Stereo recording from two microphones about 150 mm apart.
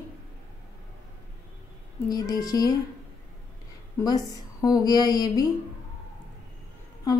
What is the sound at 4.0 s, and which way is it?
A woman's voice, 25° left (ahead or behind).